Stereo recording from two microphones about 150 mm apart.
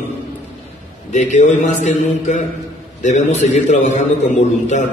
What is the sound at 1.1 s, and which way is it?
A man's voice, 50° left (ahead or behind).